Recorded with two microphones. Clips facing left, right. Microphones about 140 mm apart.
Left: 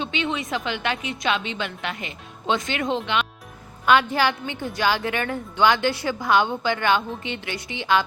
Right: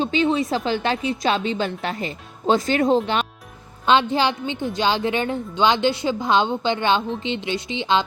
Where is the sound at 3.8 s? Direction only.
25° right (ahead or behind).